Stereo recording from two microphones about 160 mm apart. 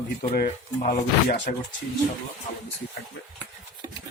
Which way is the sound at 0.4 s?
50° left (ahead or behind).